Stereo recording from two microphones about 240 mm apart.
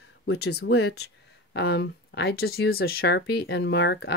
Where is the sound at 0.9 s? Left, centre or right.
Left.